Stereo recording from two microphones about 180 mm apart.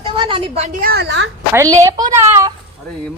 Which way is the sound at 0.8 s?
60° right (ahead or behind).